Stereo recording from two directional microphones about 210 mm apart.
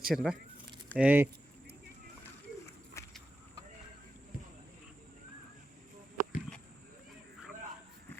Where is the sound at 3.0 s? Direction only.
15° left (ahead or behind).